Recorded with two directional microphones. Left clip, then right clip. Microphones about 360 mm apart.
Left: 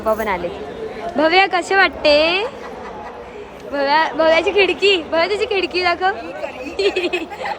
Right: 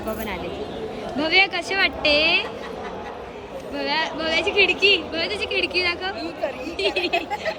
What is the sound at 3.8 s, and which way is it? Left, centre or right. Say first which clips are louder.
Speech: left 10 dB; centre.